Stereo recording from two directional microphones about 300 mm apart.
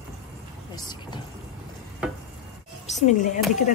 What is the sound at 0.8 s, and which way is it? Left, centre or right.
Vehicle, centre.